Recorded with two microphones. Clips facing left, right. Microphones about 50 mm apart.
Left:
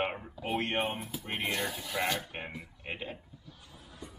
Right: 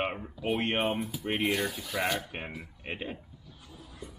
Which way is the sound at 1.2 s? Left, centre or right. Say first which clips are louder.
Right 5 dB; centre.